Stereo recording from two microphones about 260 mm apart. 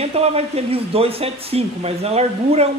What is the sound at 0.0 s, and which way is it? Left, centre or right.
Speech, right.